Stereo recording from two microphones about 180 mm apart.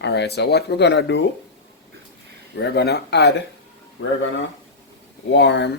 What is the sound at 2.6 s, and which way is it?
Speech, 70° left (ahead or behind).